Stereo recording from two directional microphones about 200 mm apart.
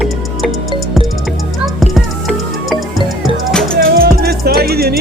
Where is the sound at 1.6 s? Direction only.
Centre (ahead or behind).